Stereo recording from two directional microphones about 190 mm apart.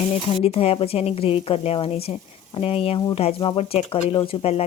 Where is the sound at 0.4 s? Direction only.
30° left (ahead or behind).